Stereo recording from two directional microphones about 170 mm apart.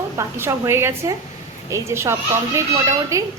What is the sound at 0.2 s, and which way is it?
A woman's voice, 15° right (ahead or behind).